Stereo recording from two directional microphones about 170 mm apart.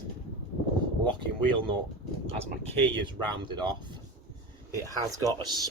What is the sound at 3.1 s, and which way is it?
Speech, 25° right (ahead or behind).